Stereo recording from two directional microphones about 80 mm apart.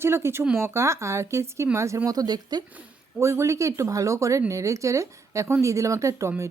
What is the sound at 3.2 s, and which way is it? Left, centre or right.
Speech, right.